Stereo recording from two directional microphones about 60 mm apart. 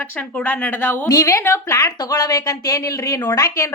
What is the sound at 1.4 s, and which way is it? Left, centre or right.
Speech, left.